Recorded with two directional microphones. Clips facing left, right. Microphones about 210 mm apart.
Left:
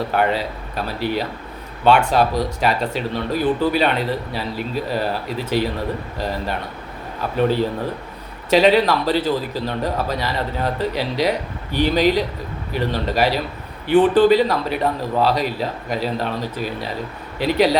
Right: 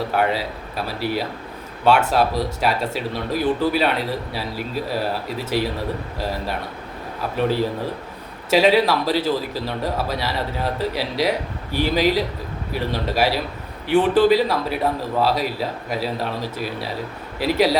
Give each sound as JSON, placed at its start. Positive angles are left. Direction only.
{"t": 0.1, "sound": "a man's voice", "side_deg": -5}
{"t": 6.1, "sound": "a man's voice", "side_deg": -5}
{"t": 8.4, "sound": "a man's voice", "side_deg": -5}